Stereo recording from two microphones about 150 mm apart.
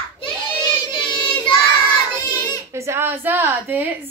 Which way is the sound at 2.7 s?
20° right (ahead or behind).